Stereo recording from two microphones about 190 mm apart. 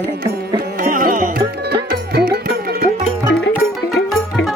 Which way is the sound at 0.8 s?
45° right (ahead or behind).